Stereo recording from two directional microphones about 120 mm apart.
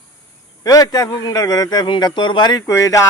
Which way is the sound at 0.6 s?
30° left (ahead or behind).